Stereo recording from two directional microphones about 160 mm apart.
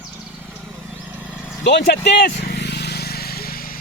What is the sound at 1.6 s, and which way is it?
Speech, 90° left.